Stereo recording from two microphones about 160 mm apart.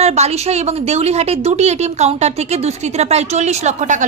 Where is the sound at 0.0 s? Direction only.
40° right (ahead or behind).